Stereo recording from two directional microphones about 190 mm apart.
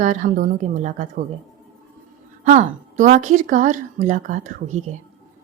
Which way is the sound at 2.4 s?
40° right (ahead or behind).